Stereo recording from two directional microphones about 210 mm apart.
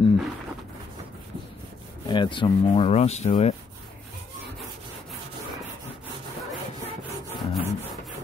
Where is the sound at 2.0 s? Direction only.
20° left (ahead or behind).